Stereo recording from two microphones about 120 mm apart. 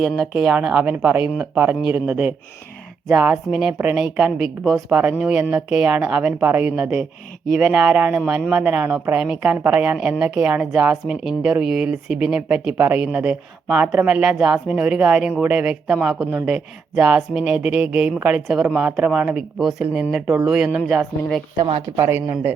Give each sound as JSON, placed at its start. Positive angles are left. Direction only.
{"t": 0.0, "sound": "a woman's voice", "side_deg": -5}
{"t": 21.9, "sound": "speech", "side_deg": -20}